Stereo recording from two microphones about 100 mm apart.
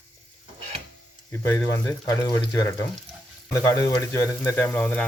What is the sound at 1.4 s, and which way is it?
Speech, 25° left (ahead or behind).